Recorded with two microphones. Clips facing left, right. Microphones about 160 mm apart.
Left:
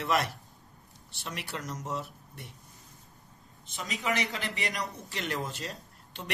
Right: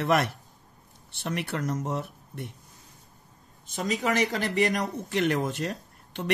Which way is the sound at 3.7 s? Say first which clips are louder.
Right 6 dB; 45° right (ahead or behind).